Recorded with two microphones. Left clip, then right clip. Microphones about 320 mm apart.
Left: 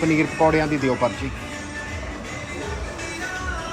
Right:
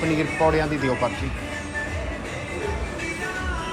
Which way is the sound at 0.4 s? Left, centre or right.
Centre.